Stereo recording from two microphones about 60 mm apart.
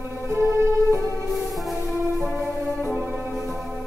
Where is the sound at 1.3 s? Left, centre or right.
Centre.